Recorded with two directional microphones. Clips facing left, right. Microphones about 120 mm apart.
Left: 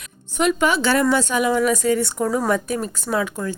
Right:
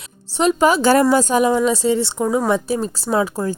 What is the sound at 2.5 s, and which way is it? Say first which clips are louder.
Speech: right 3 dB; 30° right (ahead or behind).